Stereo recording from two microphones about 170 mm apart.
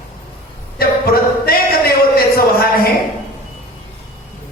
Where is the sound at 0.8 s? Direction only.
60° left (ahead or behind).